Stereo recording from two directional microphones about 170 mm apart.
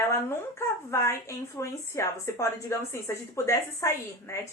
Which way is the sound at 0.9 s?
15° left (ahead or behind).